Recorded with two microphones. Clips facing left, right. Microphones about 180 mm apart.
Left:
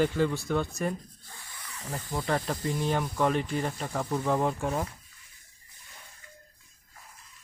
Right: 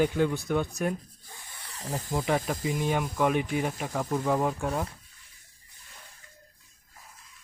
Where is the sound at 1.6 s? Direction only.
35° right (ahead or behind).